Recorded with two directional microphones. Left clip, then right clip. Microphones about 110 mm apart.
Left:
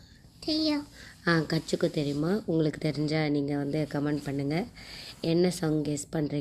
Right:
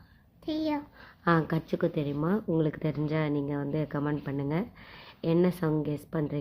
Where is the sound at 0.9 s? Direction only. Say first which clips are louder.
Right 1 dB; 30° right (ahead or behind).